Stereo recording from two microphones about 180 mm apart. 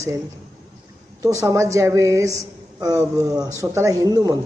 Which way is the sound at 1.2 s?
15° right (ahead or behind).